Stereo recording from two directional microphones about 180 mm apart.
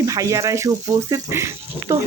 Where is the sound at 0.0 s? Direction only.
20° right (ahead or behind).